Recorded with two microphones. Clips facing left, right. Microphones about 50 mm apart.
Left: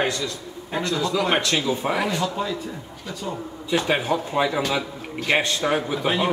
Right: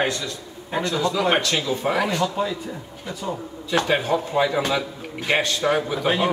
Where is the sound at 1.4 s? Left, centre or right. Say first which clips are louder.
Left 1 dB; centre.